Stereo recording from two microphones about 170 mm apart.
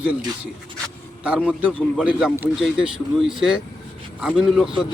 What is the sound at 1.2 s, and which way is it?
Speech, 5° right (ahead or behind).